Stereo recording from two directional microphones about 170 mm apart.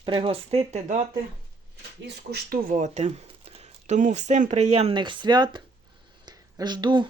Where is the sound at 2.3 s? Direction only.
55° right (ahead or behind).